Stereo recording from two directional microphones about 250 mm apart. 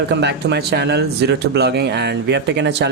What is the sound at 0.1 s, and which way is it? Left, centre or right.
Speech, right.